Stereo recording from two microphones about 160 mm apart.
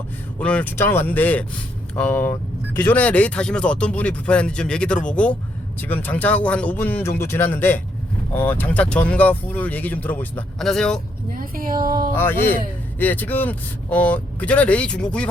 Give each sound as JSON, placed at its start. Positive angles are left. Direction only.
{"t": 0.3, "sound": "speech", "side_deg": 10}
{"t": 11.3, "sound": "speech", "side_deg": -60}
{"t": 12.1, "sound": "speech", "side_deg": 15}